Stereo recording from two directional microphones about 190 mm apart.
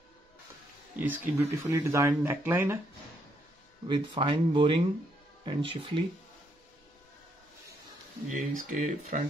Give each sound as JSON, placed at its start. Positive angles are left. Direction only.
{"t": 0.9, "sound": "speech", "side_deg": -10}
{"t": 3.8, "sound": "speech", "side_deg": -25}
{"t": 8.3, "sound": "speech", "side_deg": -40}